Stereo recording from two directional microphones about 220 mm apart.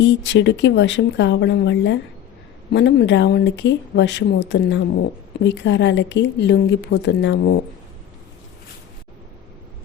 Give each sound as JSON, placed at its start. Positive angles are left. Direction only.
{"t": 0.0, "sound": "speech", "side_deg": 55}